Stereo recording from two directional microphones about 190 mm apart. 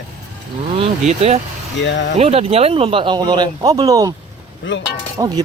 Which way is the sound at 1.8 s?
70° left (ahead or behind).